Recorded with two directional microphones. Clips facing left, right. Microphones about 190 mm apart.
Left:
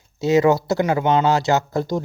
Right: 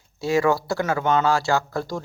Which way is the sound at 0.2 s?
20° left (ahead or behind).